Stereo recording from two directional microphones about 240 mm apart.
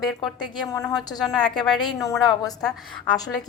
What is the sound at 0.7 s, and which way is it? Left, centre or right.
Speech, centre.